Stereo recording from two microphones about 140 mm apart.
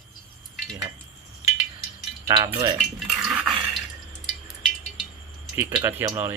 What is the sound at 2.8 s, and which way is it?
Dog, centre (ahead or behind).